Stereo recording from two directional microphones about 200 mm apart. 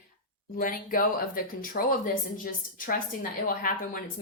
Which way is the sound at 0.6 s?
45° left (ahead or behind).